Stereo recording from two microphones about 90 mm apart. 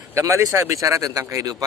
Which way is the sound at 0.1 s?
35° right (ahead or behind).